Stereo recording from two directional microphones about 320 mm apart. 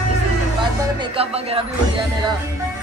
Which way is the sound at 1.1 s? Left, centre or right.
Centre.